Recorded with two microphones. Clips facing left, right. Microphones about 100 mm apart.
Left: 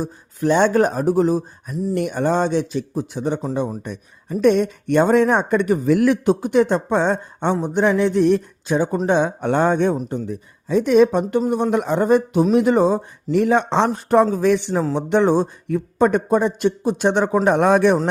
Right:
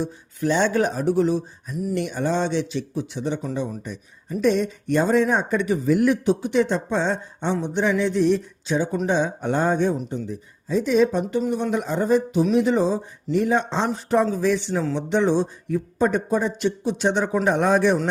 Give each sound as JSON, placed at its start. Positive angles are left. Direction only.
{"t": 0.0, "sound": "speech", "side_deg": 50}
{"t": 5.9, "sound": "a man's voice", "side_deg": 80}
{"t": 6.2, "sound": "speech", "side_deg": 50}
{"t": 15.6, "sound": "speech", "side_deg": 60}